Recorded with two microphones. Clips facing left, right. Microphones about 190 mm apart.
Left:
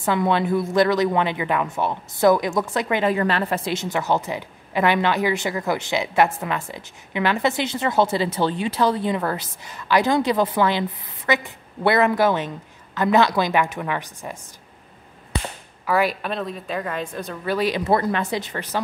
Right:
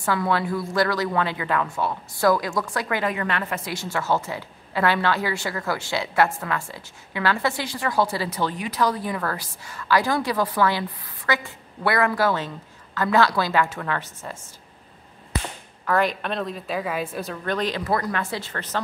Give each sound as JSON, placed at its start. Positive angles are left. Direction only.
{"t": 0.0, "sound": "a woman's voice", "side_deg": 20}
{"t": 3.2, "sound": "a woman's voice", "side_deg": 35}
{"t": 3.7, "sound": "a woman's voice", "side_deg": 20}
{"t": 15.8, "sound": "a woman's voice", "side_deg": 5}
{"t": 17.8, "sound": "a woman's voice", "side_deg": 25}